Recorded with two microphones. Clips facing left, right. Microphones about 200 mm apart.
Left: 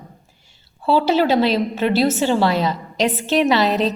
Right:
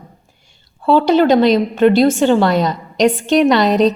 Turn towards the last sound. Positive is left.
turn(degrees=5)  # may be behind; listen again after turning